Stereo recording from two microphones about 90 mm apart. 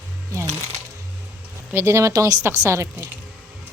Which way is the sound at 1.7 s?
30° right (ahead or behind).